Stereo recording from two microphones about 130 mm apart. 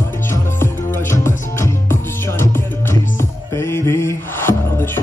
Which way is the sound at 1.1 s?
20° left (ahead or behind).